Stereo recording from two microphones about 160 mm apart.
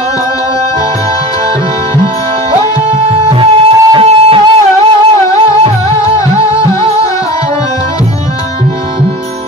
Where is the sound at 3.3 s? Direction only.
35° right (ahead or behind).